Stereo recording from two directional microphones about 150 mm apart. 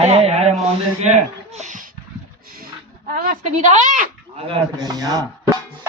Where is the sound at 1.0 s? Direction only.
50° right (ahead or behind).